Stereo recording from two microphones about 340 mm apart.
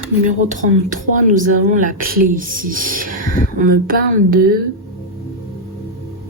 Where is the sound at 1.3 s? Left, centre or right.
Right.